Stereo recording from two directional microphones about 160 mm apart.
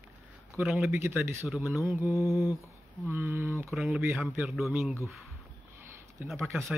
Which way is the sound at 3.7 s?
Centre (ahead or behind).